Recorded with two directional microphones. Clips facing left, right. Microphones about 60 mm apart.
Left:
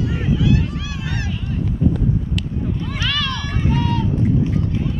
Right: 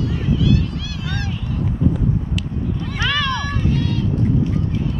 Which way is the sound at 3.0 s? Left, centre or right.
Right.